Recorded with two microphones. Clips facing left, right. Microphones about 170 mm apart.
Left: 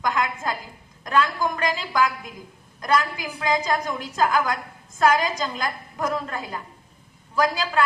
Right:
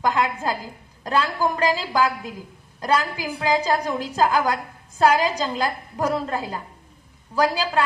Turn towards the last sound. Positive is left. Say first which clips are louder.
# right 1 dB
turn(degrees=-35)  # may be behind; listen again after turning